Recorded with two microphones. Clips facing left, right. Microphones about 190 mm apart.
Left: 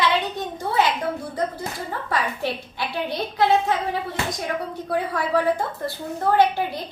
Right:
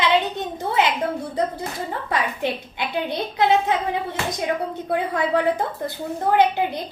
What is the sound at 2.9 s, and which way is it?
Speech, 20° right (ahead or behind).